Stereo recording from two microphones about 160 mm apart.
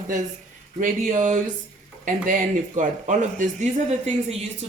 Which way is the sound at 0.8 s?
55° right (ahead or behind).